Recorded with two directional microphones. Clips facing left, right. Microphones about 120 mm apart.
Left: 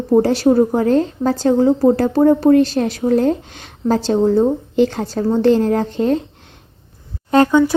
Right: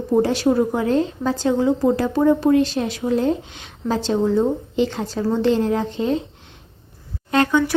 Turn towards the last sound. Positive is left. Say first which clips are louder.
# left 5 dB
turn(degrees=30)  # may be behind; listen again after turning